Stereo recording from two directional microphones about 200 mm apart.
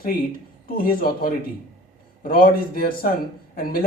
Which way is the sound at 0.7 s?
45° left (ahead or behind).